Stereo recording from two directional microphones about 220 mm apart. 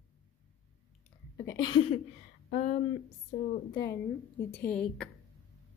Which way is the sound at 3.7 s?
15° left (ahead or behind).